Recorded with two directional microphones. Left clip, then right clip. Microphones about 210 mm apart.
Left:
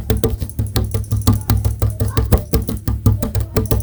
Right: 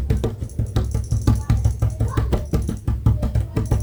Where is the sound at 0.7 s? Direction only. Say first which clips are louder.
Left 5 dB; 55° left (ahead or behind).